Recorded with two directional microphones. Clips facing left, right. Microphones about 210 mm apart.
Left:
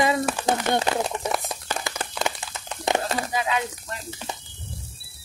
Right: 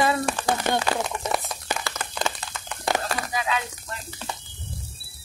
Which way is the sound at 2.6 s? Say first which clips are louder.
Left 2 dB; 20° left (ahead or behind).